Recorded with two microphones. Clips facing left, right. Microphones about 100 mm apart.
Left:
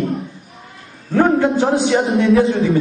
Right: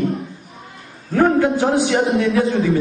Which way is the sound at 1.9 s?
30° left (ahead or behind).